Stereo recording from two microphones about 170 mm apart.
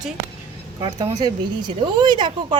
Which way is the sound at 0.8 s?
25° right (ahead or behind).